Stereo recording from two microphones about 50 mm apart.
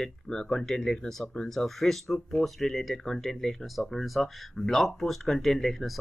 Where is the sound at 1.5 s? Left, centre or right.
Centre.